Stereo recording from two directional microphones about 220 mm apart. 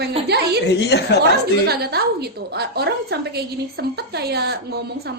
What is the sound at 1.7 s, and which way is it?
A woman's voice, 45° right (ahead or behind).